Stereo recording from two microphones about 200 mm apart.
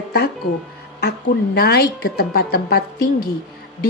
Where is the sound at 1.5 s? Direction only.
50° left (ahead or behind).